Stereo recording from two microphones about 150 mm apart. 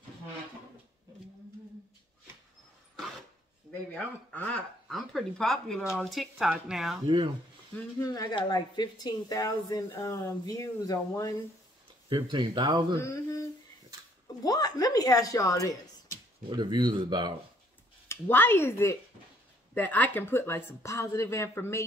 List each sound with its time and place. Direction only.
3.9 s speech: 10° left (ahead or behind)
8.0 s speech: 25° left (ahead or behind)
12.1 s speech: 30° right (ahead or behind)
13.0 s speech: 20° left (ahead or behind)
14.4 s speech: 25° left (ahead or behind)
16.4 s speech: 30° right (ahead or behind)
18.0 s speech: 15° left (ahead or behind)